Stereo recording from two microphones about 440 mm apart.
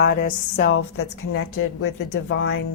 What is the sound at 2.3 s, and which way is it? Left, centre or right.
Speech, left.